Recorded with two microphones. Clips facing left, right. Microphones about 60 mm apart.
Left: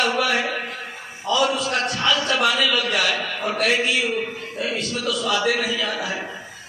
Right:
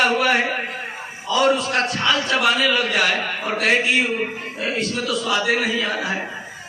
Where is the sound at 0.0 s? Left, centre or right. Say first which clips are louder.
Right 3 dB; right.